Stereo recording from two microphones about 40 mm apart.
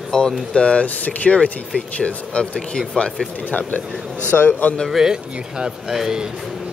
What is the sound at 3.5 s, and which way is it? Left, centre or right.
A man's voice, left.